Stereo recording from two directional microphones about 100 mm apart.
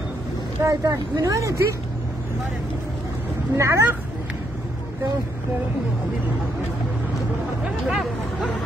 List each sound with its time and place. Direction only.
0.7 s speech: 35° right (ahead or behind)
3.5 s speech: 30° right (ahead or behind)
7.9 s speech: 5° right (ahead or behind)